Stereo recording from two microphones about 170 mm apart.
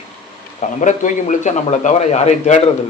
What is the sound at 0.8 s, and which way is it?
A man's voice, 45° left (ahead or behind).